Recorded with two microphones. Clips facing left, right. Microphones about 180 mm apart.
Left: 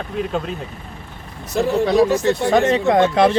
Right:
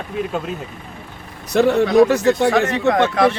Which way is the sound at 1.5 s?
70° right (ahead or behind).